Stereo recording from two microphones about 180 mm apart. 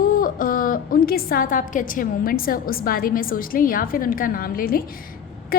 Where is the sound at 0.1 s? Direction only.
50° left (ahead or behind).